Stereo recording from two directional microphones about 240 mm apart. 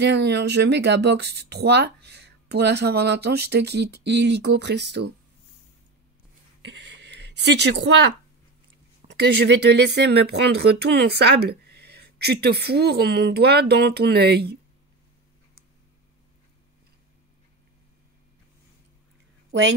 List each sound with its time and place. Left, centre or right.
0.0 s speech: right
6.6 s speech: right